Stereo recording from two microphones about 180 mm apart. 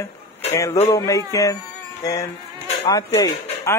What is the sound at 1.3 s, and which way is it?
Speech, 15° left (ahead or behind).